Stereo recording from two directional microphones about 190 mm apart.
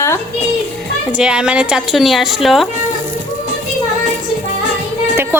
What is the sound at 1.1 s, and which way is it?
A woman's voice, 5° right (ahead or behind).